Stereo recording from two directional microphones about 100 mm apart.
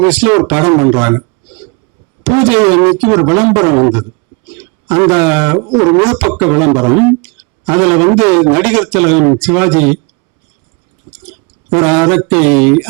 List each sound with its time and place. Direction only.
0.0 s speech: 15° right (ahead or behind)
2.2 s speech: 20° right (ahead or behind)
11.3 s speech: 20° right (ahead or behind)